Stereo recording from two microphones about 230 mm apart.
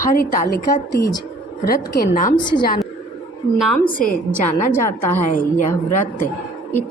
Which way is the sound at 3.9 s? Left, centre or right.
Left.